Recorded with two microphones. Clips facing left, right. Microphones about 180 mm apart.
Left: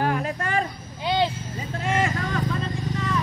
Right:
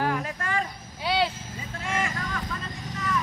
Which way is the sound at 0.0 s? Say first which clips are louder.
Left 3 dB; 25° left (ahead or behind).